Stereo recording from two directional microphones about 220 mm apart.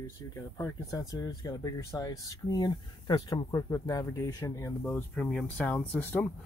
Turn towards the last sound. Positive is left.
turn(degrees=5)  # may be behind; listen again after turning